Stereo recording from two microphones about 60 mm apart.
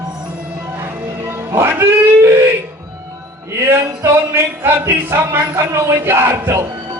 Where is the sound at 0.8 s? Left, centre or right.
Right.